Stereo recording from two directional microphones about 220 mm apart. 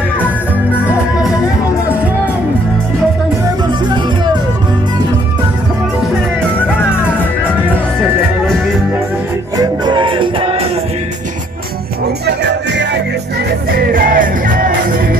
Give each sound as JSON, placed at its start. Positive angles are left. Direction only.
{"t": 9.6, "sound": "music", "side_deg": -20}
{"t": 12.3, "sound": "music", "side_deg": -50}